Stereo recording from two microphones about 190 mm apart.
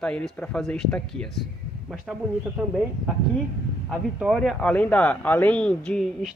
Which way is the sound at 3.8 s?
Centre (ahead or behind).